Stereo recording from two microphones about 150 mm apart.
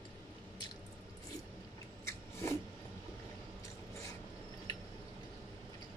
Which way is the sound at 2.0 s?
15° left (ahead or behind).